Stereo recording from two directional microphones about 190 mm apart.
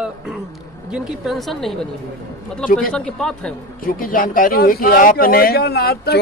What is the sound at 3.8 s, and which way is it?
Speech, 50° left (ahead or behind).